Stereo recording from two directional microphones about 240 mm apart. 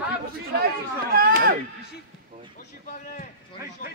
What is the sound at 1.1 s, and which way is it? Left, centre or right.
Speech, right.